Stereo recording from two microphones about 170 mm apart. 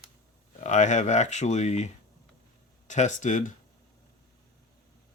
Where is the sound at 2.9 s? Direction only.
45° left (ahead or behind).